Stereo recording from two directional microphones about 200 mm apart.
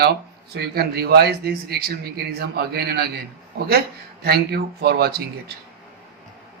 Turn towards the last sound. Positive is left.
turn(degrees=-55)  # may be behind; listen again after turning